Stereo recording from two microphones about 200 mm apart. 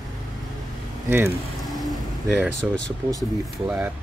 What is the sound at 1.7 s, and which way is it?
Vehicle, centre (ahead or behind).